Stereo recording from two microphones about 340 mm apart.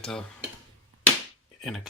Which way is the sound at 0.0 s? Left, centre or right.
Centre.